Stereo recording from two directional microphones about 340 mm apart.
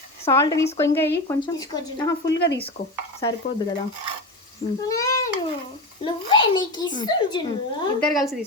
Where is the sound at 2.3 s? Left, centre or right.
Left.